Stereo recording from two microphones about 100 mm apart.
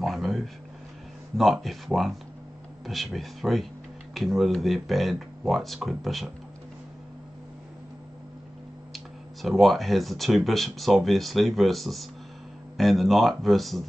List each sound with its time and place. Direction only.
0.0 s a sound: centre (ahead or behind)
1.3 s speech: centre (ahead or behind)
8.9 s speech: centre (ahead or behind)